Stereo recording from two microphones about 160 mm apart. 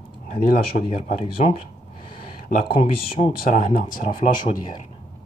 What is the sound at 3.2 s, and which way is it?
Speech, 55° left (ahead or behind).